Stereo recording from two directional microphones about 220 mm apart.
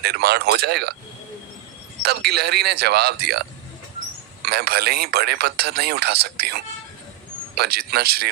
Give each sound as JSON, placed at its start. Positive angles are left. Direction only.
{"t": 0.0, "sound": "speech", "side_deg": -45}
{"t": 2.0, "sound": "speech", "side_deg": -45}
{"t": 4.4, "sound": "speech", "side_deg": -45}